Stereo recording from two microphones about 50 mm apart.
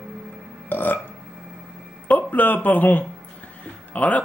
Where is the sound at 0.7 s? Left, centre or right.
Left.